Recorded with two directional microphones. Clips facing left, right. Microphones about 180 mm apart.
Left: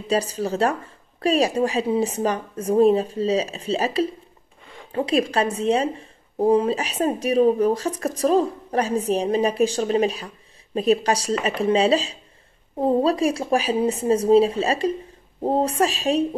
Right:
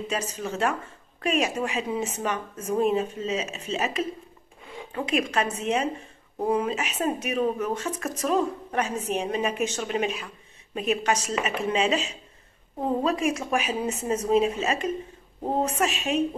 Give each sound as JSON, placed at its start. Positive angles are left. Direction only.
{"t": 0.1, "sound": "a woman's voice", "side_deg": 35}